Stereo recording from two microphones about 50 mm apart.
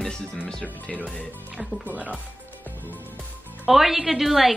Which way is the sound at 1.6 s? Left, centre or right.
Right.